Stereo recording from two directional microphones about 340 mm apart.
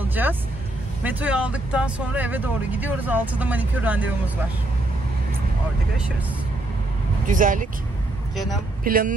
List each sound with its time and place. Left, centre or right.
0.0 s vehicle: centre
1.0 s speech: centre
7.2 s speech: right
8.8 s speech: right